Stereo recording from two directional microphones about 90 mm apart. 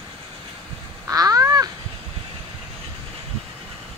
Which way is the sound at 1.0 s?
40° right (ahead or behind).